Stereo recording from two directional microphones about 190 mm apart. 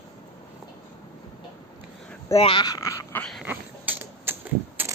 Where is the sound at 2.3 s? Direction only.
30° left (ahead or behind).